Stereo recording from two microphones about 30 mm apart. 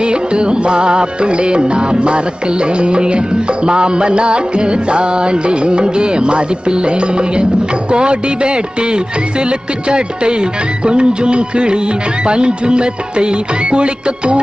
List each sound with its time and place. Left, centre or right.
0.0 s music: right